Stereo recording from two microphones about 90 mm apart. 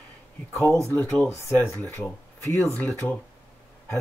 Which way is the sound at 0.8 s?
30° left (ahead or behind).